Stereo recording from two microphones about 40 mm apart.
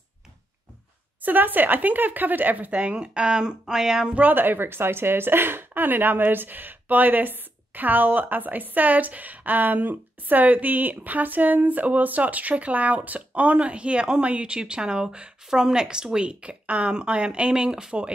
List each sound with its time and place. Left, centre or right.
1.2 s speech: right; by 4.1 s centre
4.1 s speech: right